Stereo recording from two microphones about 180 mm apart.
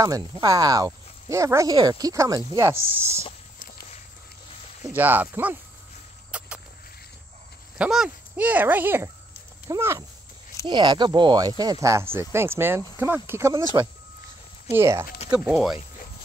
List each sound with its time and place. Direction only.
0.0 s speech: 20° right (ahead or behind)
4.9 s speech: 10° right (ahead or behind)
6.3 s a sound: 5° right (ahead or behind)
7.7 s speech: 5° right (ahead or behind)
14.7 s speech: 15° right (ahead or behind)